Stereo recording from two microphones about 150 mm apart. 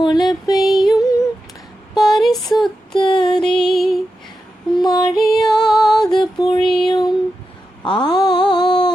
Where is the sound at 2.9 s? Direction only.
30° left (ahead or behind).